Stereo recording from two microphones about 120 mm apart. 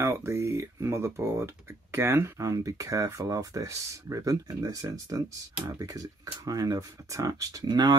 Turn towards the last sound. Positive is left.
turn(degrees=-35)  # may be behind; listen again after turning